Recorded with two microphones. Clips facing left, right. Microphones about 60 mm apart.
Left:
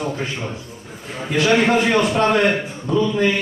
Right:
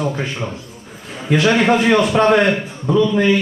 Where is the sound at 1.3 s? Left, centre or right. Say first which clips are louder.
Right 2 dB; right.